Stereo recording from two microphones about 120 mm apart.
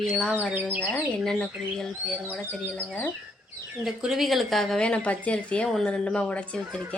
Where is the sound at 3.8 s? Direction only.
5° right (ahead or behind).